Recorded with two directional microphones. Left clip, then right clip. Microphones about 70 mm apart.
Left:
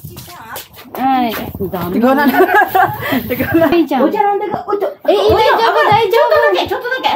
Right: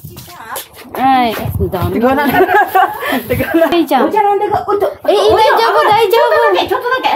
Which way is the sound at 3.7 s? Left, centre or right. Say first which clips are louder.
Right 2 dB; right.